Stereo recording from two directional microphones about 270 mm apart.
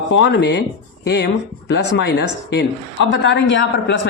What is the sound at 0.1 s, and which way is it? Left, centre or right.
Speech, left.